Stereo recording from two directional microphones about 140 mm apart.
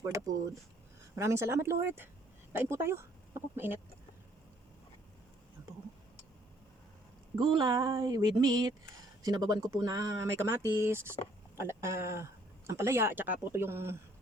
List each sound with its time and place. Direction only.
0.0 s speech: 25° right (ahead or behind)
7.3 s speech: 35° right (ahead or behind); by 13.9 s 15° right (ahead or behind)